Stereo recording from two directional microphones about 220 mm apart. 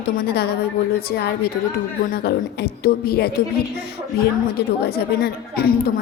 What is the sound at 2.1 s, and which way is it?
A woman's voice, 45° left (ahead or behind).